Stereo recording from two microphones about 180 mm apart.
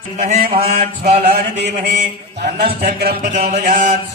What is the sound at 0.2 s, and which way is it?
Chant, 45° right (ahead or behind).